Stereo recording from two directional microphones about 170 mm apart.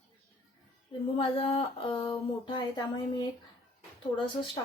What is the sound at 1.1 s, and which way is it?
Speech, 35° left (ahead or behind).